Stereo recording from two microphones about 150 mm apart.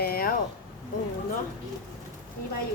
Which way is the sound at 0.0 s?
85° left.